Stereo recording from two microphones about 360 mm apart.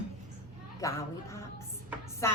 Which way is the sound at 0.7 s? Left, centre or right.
Centre.